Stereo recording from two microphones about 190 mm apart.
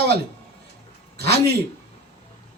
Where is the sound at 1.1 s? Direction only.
55° right (ahead or behind).